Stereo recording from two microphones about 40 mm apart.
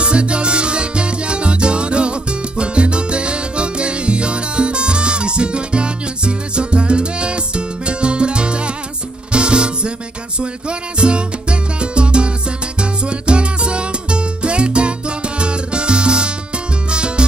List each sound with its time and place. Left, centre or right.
0.0 s salsa music: right
9.3 s music: right